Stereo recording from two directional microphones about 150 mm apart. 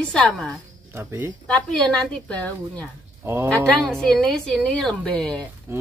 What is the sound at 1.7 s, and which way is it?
A woman's voice, 5° left (ahead or behind).